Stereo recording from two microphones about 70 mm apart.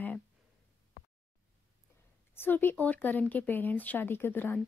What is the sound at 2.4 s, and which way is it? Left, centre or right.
Speech, left.